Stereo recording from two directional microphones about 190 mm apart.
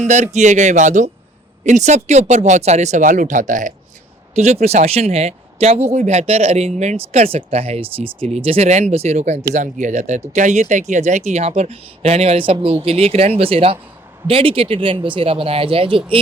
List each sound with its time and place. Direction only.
0.0 s speech: 40° right (ahead or behind)